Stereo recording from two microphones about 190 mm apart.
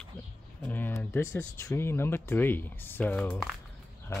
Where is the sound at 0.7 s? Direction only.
10° left (ahead or behind).